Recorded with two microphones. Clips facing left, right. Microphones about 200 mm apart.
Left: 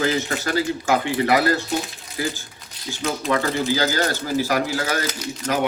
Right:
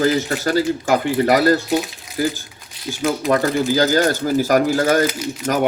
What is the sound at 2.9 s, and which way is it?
Speech, 50° right (ahead or behind).